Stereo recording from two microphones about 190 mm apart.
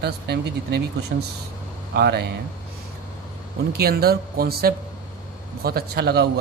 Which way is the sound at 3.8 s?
55° right (ahead or behind).